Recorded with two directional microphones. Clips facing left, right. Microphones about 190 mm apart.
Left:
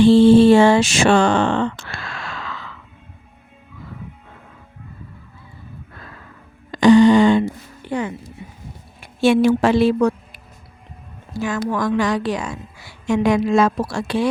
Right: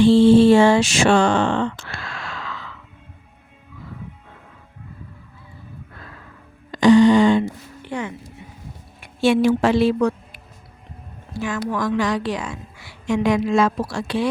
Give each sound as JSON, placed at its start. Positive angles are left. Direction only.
{"t": 0.0, "sound": "speech", "side_deg": 60}
{"t": 6.7, "sound": "a sound", "side_deg": 60}
{"t": 7.9, "sound": "speech", "side_deg": 35}
{"t": 9.2, "sound": "a woman's voice", "side_deg": 55}